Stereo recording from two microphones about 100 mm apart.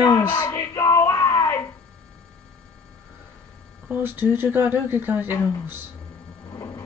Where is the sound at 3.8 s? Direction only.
20° right (ahead or behind).